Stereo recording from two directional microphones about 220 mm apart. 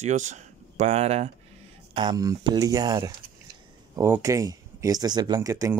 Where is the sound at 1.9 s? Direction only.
20° right (ahead or behind).